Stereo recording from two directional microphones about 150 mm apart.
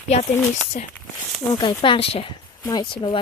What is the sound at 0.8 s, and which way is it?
Speech, 65° left (ahead or behind).